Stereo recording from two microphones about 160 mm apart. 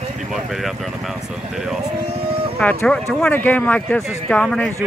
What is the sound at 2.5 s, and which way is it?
Speech, 5° left (ahead or behind).